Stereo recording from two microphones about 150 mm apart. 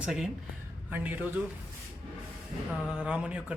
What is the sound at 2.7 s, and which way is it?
Speech, 5° right (ahead or behind).